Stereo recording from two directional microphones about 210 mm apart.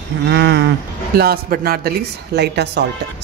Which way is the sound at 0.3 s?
55° right (ahead or behind).